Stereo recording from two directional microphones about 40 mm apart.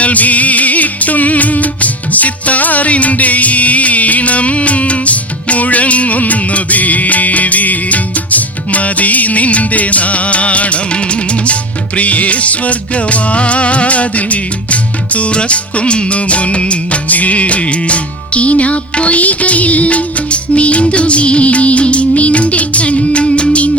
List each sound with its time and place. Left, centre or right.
0.0 s music: left